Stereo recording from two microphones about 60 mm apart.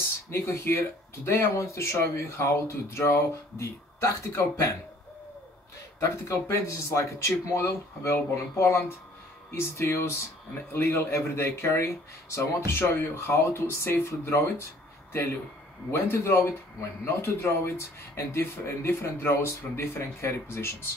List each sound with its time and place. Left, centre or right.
0.3 s speech: left
5.9 s speech: left
15.9 s a man's voice: left